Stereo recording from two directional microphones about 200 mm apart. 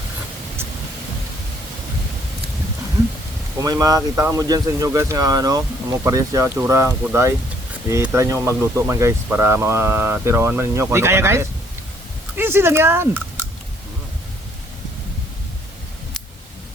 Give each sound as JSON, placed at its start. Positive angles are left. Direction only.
{"t": 3.6, "sound": "speech", "side_deg": -20}